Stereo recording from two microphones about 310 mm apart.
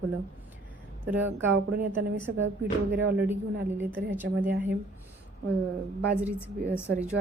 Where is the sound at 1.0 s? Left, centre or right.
Centre.